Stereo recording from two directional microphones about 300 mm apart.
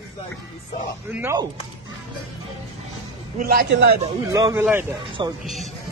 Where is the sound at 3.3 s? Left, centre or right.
Right.